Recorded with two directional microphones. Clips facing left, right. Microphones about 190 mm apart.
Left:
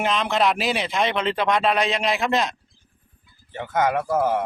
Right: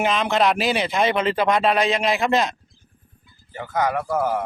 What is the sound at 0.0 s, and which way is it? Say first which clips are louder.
Speech: right 2 dB; centre (ahead or behind).